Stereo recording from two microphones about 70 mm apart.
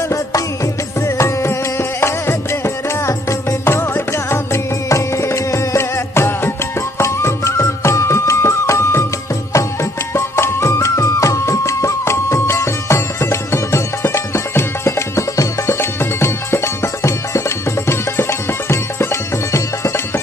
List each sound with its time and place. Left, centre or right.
1.1 s music: left
3.6 s music: left